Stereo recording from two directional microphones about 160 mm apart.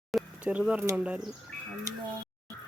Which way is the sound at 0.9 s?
10° right (ahead or behind).